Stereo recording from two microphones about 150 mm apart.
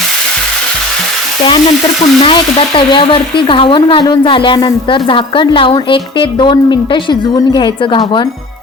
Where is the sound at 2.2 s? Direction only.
35° left (ahead or behind).